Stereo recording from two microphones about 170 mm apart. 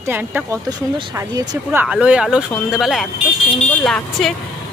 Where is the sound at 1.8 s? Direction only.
5° right (ahead or behind).